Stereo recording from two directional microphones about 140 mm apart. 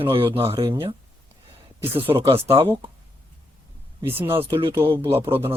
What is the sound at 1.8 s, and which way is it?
Speech, 40° right (ahead or behind).